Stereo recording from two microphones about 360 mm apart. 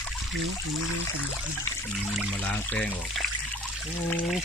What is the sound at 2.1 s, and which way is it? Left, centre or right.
Speech, centre.